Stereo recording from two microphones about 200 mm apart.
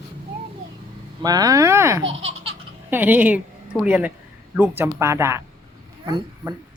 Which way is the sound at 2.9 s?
10° right (ahead or behind).